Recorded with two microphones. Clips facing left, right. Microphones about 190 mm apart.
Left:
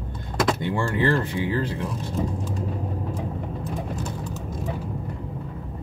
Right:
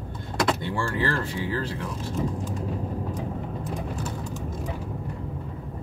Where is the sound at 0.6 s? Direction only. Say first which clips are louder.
Left 3 dB; 15° left (ahead or behind).